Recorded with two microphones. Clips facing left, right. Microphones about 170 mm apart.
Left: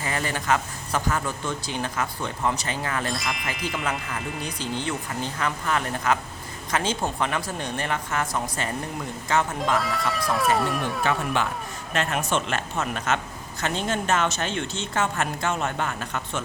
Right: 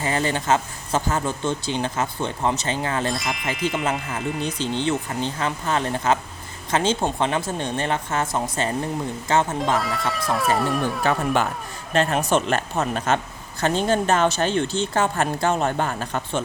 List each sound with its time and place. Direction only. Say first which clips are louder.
0.0 s speech: right 5 dB; 25° right (ahead or behind)
3.1 s speech: right 3 dB; centre (ahead or behind)
4.4 s speech: right 6 dB; 25° right (ahead or behind)
9.7 s speech: right 1 dB; centre (ahead or behind)
11.9 s speech: right 5 dB; 35° right (ahead or behind)